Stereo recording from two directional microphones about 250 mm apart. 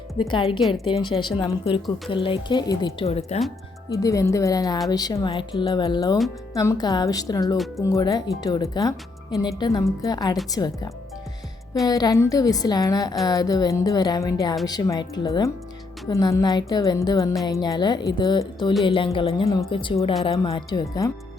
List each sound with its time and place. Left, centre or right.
0.2 s speech: centre
3.8 s speech: centre
11.9 s speech: centre